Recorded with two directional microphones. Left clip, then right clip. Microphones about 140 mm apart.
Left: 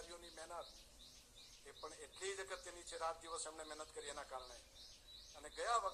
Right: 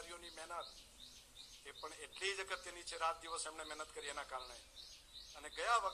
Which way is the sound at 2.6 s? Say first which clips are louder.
Right 3 dB; 30° right (ahead or behind).